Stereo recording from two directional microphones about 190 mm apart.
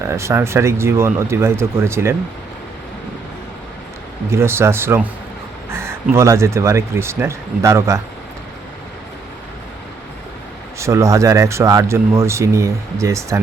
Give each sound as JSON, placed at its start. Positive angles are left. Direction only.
{"t": 0.1, "sound": "speech", "side_deg": -15}
{"t": 4.3, "sound": "speech", "side_deg": -15}
{"t": 10.8, "sound": "speech", "side_deg": -15}